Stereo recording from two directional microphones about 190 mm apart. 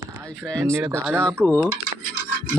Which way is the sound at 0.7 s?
15° right (ahead or behind).